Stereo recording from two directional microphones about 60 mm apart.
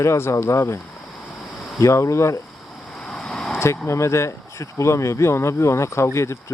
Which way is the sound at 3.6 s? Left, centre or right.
Left.